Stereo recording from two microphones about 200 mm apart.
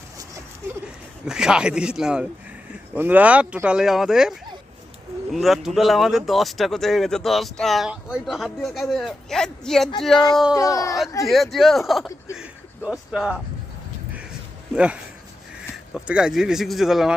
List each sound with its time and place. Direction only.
1.2 s speech: 5° right (ahead or behind)
10.5 s speech: 15° left (ahead or behind)
11.3 s speech: centre (ahead or behind)
15.7 s speech: 5° right (ahead or behind)